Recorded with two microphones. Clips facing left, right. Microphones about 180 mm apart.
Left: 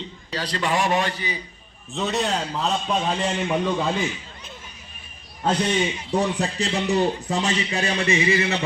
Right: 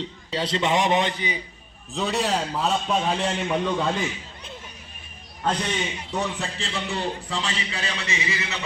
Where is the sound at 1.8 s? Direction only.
Centre (ahead or behind).